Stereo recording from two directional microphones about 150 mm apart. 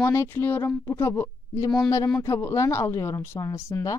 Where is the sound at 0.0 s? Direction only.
15° left (ahead or behind).